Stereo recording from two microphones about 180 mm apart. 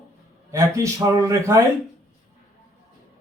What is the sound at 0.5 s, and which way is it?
Speech, 15° right (ahead or behind).